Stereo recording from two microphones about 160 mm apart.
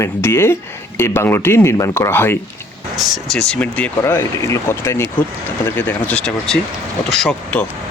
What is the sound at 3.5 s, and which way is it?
Speech, 10° left (ahead or behind).